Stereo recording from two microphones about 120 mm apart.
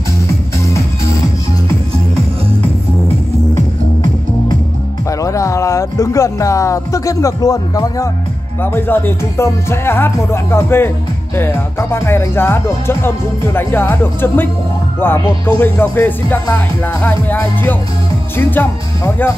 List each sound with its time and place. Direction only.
5.2 s speech: 25° left (ahead or behind)
8.7 s speech: 15° left (ahead or behind)